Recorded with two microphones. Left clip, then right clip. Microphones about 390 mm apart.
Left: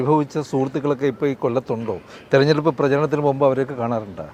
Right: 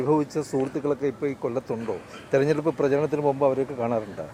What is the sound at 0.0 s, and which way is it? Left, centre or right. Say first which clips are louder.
Speech: left 4 dB; left.